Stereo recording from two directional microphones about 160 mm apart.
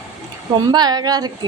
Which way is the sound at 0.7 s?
25° right (ahead or behind).